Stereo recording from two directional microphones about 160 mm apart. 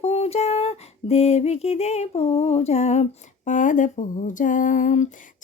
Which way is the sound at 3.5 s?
50° left (ahead or behind).